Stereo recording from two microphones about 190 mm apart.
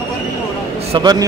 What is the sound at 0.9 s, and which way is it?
Speech, 20° right (ahead or behind).